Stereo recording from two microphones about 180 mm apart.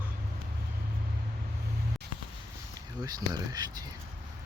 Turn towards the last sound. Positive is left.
turn(degrees=-20)  # may be behind; listen again after turning